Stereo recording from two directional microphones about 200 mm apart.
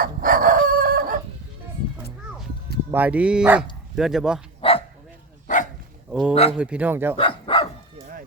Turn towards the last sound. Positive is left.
turn(degrees=25)  # may be behind; listen again after turning